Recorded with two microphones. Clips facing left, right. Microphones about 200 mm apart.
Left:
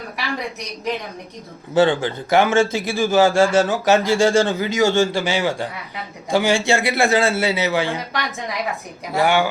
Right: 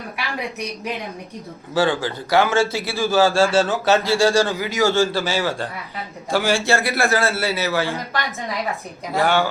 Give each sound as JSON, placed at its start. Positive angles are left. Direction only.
{"t": 1.7, "sound": "a man's voice", "side_deg": 20}